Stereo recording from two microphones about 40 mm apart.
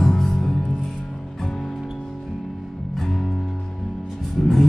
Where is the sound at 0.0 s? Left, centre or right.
Centre.